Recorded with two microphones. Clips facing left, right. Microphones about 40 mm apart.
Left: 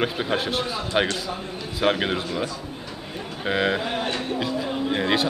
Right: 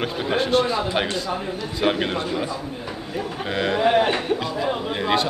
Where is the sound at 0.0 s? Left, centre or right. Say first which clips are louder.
Right 1 dB; centre.